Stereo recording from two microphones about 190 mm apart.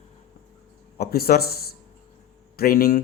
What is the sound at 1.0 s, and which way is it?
Speech, 55° left (ahead or behind).